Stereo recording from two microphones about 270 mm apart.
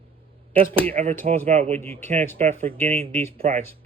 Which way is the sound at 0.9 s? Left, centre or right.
Right.